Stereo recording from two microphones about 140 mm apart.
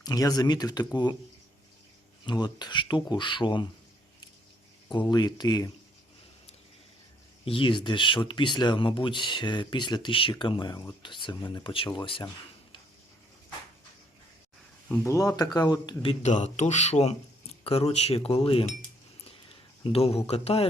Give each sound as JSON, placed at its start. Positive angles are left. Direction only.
{"t": 0.0, "sound": "speech", "side_deg": 25}
{"t": 2.2, "sound": "speech", "side_deg": 30}
{"t": 4.9, "sound": "speech", "side_deg": 30}
{"t": 7.4, "sound": "speech", "side_deg": 40}
{"t": 14.8, "sound": "speech", "side_deg": 20}
{"t": 16.2, "sound": "speech", "side_deg": 55}
{"t": 19.8, "sound": "speech", "side_deg": 45}